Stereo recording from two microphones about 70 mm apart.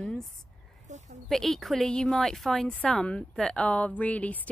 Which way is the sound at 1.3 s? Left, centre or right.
Centre.